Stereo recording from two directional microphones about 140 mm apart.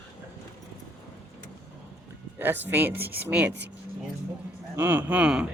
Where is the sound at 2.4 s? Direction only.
15° right (ahead or behind).